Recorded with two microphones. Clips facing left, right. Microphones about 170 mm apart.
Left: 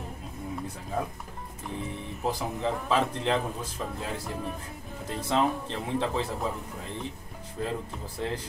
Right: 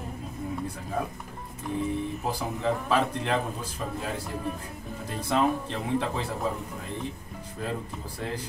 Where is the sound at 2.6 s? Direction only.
20° left (ahead or behind).